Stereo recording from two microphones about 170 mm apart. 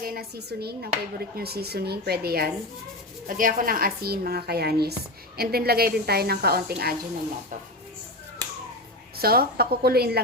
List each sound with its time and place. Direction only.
0.0 s speech: 65° right (ahead or behind)
3.2 s a woman's voice: 55° right (ahead or behind)
9.1 s a woman's voice: 65° right (ahead or behind)